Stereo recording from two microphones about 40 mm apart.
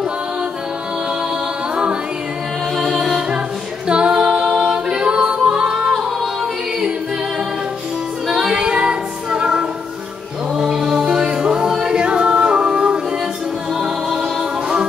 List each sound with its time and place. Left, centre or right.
2.8 s music: centre
3.8 s a capella: right
8.3 s music: right
13.7 s music: centre